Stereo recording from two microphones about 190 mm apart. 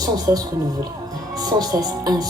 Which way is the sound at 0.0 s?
20° right (ahead or behind).